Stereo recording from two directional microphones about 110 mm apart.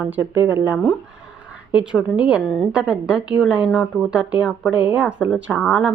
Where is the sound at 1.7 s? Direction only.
10° right (ahead or behind).